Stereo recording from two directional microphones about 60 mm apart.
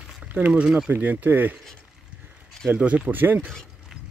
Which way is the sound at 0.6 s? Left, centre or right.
Centre.